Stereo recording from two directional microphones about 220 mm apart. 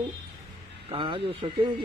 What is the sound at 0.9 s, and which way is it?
Speech, 25° right (ahead or behind).